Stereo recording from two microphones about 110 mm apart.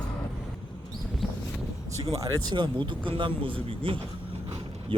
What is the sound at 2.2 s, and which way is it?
Speech, 40° right (ahead or behind).